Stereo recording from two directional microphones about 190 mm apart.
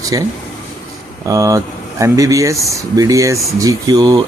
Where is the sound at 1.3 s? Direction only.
15° right (ahead or behind).